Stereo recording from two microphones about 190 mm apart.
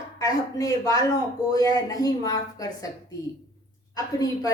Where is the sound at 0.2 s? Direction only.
20° left (ahead or behind).